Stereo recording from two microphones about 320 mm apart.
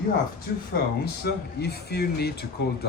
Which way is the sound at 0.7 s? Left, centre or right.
Left.